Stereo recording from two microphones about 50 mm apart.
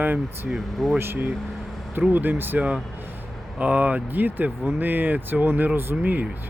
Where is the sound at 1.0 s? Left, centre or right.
Right.